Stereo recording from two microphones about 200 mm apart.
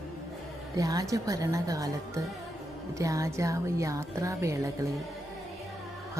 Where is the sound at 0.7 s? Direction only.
15° right (ahead or behind).